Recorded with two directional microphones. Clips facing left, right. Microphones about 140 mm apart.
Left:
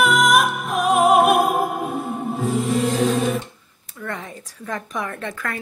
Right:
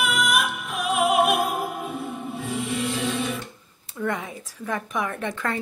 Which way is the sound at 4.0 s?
10° right (ahead or behind).